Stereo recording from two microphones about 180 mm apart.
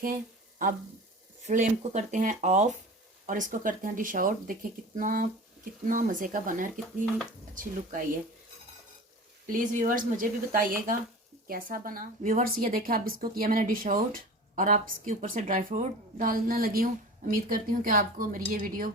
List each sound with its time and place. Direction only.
1.4 s a woman's voice: 40° right (ahead or behind)
6.7 s speech: centre (ahead or behind)
7.5 s a woman's voice: 50° right (ahead or behind)
9.5 s a woman's voice: 45° right (ahead or behind)